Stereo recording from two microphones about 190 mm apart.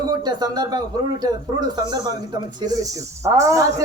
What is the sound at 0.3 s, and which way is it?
Speech, 20° right (ahead or behind).